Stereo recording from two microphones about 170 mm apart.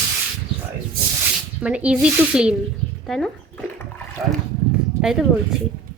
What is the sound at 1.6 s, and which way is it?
Speech, 5° right (ahead or behind).